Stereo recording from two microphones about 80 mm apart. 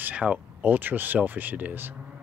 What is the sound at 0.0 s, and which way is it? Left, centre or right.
Speech, centre.